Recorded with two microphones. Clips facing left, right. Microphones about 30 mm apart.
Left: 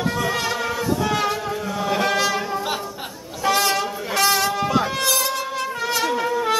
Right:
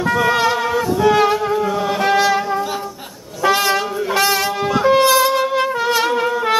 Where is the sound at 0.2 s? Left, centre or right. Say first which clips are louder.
Right 7 dB; centre.